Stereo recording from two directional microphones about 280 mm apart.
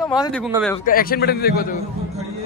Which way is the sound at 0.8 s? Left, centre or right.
Left.